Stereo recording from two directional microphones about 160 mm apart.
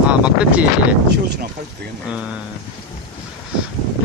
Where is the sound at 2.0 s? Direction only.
5° right (ahead or behind).